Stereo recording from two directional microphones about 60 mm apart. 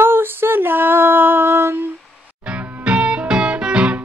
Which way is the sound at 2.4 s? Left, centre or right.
Right.